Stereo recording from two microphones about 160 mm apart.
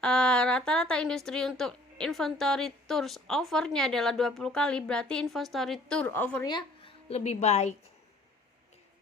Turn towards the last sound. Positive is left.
turn(degrees=45)  # may be behind; listen again after turning